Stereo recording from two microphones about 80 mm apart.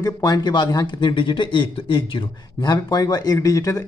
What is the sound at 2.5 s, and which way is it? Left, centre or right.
Speech, left.